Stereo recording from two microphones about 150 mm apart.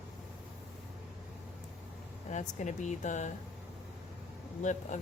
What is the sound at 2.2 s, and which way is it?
Speech, 55° left (ahead or behind).